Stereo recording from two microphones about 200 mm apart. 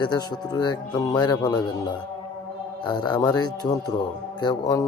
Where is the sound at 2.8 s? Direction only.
20° left (ahead or behind).